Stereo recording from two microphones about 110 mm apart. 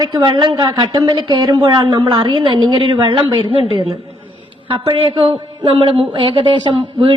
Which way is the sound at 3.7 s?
65° right (ahead or behind).